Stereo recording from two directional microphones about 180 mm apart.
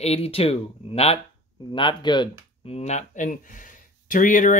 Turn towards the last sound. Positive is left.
turn(degrees=45)  # may be behind; listen again after turning